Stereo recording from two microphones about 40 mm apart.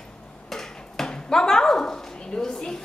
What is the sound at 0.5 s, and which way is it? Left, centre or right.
Dog, centre.